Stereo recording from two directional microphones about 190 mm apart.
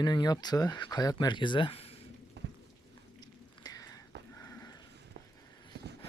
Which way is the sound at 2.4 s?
65° right (ahead or behind).